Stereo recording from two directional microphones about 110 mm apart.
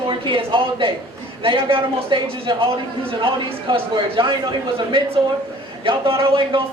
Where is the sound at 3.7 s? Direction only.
50° right (ahead or behind).